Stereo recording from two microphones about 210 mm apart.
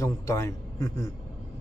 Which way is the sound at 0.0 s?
15° left (ahead or behind).